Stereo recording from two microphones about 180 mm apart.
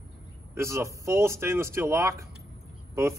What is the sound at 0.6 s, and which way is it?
Speech, 15° right (ahead or behind).